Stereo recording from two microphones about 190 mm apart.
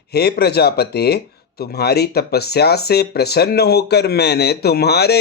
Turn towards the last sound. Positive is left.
turn(degrees=60)  # may be behind; listen again after turning